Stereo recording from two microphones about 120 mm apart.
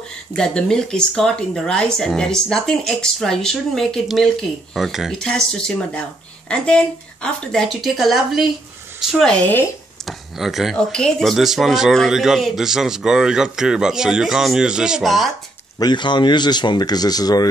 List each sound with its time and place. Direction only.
0.4 s speech: 5° left (ahead or behind)
10.0 s speech: centre (ahead or behind)
15.8 s speech: 40° left (ahead or behind)